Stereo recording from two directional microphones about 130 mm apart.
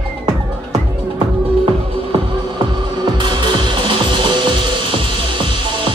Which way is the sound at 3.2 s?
35° right (ahead or behind).